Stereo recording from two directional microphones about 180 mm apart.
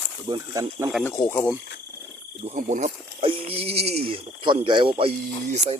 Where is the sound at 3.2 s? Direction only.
30° right (ahead or behind).